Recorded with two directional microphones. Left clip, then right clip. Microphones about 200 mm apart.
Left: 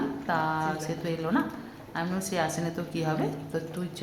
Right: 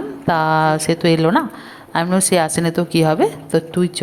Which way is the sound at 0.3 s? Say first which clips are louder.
Right 14 dB; 45° right (ahead or behind).